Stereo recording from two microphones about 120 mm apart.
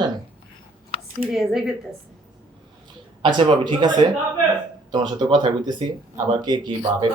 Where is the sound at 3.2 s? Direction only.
40° right (ahead or behind).